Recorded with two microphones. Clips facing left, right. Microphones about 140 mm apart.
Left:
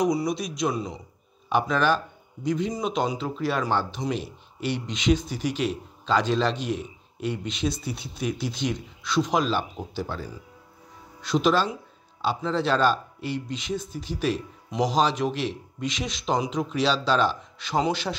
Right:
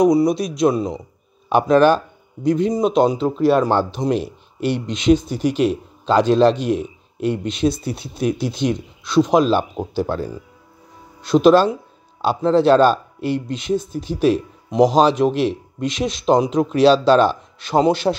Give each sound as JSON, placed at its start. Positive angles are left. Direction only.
{"t": 0.0, "sound": "a man's voice", "side_deg": -55}